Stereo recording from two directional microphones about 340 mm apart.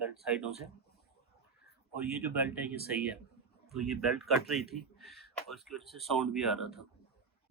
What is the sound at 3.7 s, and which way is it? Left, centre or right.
Speech, centre.